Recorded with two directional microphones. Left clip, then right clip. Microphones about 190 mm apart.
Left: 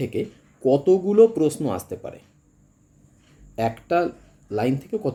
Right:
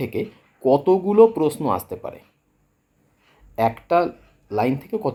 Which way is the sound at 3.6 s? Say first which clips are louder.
Right 3 dB; 15° left (ahead or behind).